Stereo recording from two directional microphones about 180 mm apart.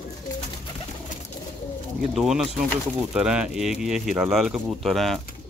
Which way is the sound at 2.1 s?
Centre (ahead or behind).